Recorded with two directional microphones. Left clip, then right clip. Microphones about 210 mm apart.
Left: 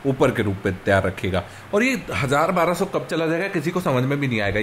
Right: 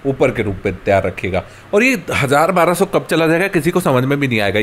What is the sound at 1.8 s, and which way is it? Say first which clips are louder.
Speech: right 7 dB; 20° right (ahead or behind).